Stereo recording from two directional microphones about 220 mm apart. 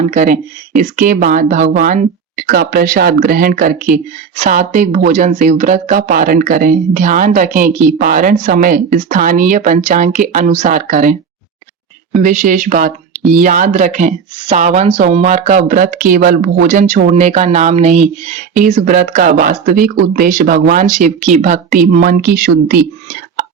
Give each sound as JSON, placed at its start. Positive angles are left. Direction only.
{"t": 0.1, "sound": "speech", "side_deg": -35}
{"t": 12.2, "sound": "speech", "side_deg": -35}